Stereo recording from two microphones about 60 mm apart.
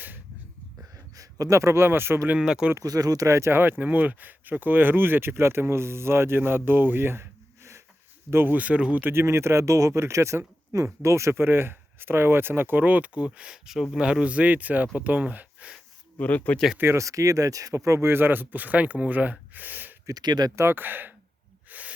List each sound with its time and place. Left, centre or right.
0.8 s a sound: right
2.4 s speech: centre
2.7 s speech: right
3.2 s speech: right
3.6 s speech: right
8.5 s speech: right
9.1 s speech: right
16.1 s speech: left
16.7 s speech: right
17.0 s speech: right
20.1 s speech: right
20.6 s speech: right
21.7 s hiss: right